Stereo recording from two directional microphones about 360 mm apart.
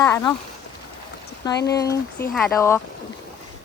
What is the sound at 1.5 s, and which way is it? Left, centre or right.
Speech, left.